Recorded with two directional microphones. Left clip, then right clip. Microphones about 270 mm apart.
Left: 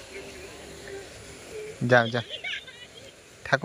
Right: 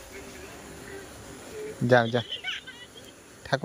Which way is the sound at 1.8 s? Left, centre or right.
Centre.